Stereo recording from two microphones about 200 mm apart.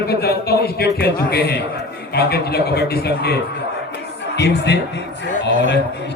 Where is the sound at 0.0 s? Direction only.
55° left (ahead or behind).